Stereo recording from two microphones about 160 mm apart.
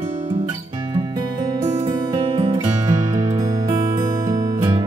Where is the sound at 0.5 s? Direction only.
25° right (ahead or behind).